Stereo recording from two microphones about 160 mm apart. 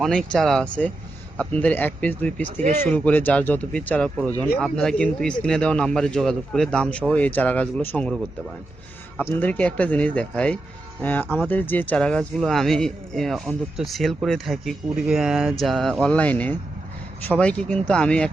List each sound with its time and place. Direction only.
0.0 s a man's voice: 5° left (ahead or behind)
2.6 s speech: 50° right (ahead or behind)
2.9 s a man's voice: 10° left (ahead or behind)
9.3 s a man's voice: 10° left (ahead or behind)